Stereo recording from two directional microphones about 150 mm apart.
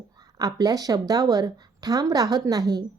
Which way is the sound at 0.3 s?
25° right (ahead or behind).